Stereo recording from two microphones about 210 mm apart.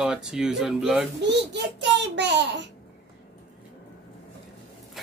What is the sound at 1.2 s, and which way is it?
A child's voice, 55° right (ahead or behind).